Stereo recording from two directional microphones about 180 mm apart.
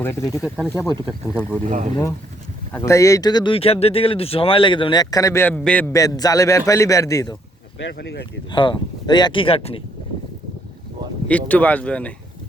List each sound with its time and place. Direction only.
0.0 s speech: 15° left (ahead or behind)
0.4 s speech: 5° right (ahead or behind)
0.7 s speech: 15° left (ahead or behind)
1.6 s speech: 45° right (ahead or behind)
2.7 s speech: 15° left (ahead or behind)
7.8 s speech: 80° left
8.4 s speech: 25° left (ahead or behind)
11.3 s speech: 10° left (ahead or behind)